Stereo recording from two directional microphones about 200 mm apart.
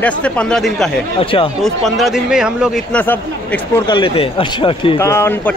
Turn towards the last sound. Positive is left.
turn(degrees=10)  # may be behind; listen again after turning